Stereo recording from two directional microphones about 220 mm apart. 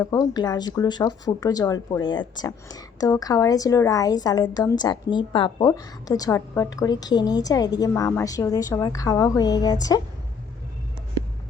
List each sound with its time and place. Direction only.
0.0 s speech: 15° left (ahead or behind)